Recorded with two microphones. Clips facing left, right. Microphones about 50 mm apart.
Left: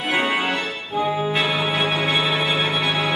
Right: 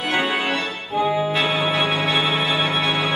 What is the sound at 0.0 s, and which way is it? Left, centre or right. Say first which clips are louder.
Organ: even; centre.